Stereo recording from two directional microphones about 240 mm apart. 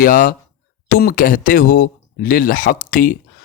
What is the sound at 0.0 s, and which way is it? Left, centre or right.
Speech, left.